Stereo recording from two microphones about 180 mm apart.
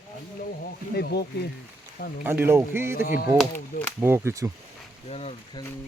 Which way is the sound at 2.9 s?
50° left (ahead or behind).